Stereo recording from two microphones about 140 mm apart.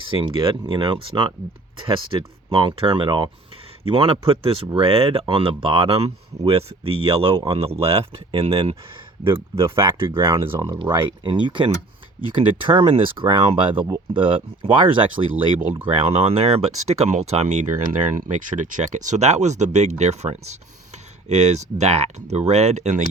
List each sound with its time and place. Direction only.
0.0 s speech: 35° right (ahead or behind)
7.0 s speech: 40° right (ahead or behind)
9.3 s speech: 20° right (ahead or behind)
9.7 s speech: 35° right (ahead or behind)
10.3 s speech: 25° right (ahead or behind)
10.8 s speech: 35° right (ahead or behind)
13.8 s speech: 25° right (ahead or behind)
14.2 s speech: 40° right (ahead or behind); by 17.7 s 55° right (ahead or behind)
18.2 s speech: 65° right (ahead or behind)